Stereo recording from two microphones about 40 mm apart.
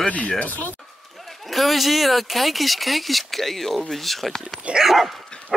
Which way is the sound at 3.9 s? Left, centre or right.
Centre.